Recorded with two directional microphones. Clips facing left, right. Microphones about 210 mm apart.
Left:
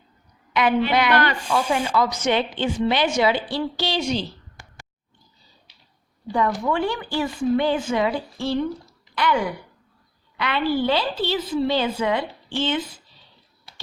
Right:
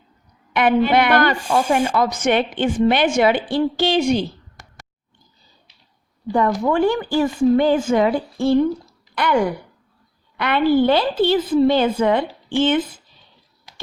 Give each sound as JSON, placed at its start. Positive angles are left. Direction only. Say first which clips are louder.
{"t": 0.5, "sound": "speech", "louder": "right 4 dB", "side_deg": -50}
{"t": 6.3, "sound": "a woman's voice", "louder": "right 4 dB", "side_deg": -45}